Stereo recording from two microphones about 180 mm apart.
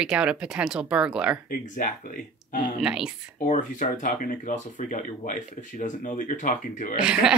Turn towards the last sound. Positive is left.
turn(degrees=-5)  # may be behind; listen again after turning